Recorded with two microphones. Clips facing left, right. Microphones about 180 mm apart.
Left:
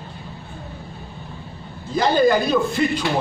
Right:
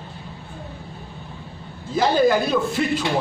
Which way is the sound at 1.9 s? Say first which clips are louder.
Left 1 dB; 5° right (ahead or behind).